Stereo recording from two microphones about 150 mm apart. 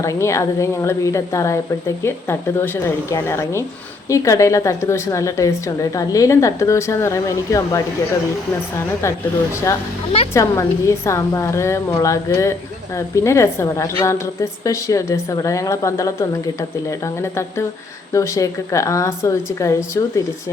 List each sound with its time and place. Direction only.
0.0 s a woman's voice: 20° left (ahead or behind)
10.3 s a woman's voice: 20° left (ahead or behind)
18.1 s a woman's voice: 20° left (ahead or behind)